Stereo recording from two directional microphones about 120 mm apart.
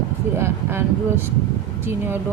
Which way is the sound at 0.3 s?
20° right (ahead or behind).